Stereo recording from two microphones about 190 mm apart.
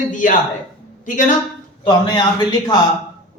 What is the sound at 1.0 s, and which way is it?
Speech, 45° left (ahead or behind).